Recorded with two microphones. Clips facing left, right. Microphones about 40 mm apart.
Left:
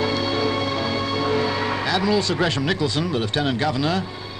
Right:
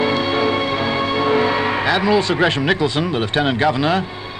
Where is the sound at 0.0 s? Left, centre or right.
Right.